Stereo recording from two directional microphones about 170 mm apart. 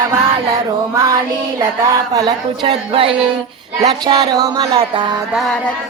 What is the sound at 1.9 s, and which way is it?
Music, 20° right (ahead or behind).